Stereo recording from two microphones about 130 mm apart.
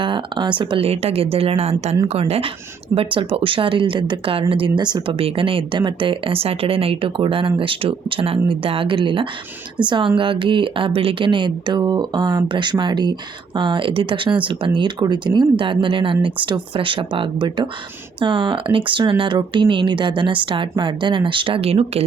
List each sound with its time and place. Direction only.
0.0 s speech: 40° right (ahead or behind)